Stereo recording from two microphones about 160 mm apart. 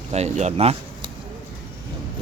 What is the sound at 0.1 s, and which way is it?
Speech, 45° right (ahead or behind).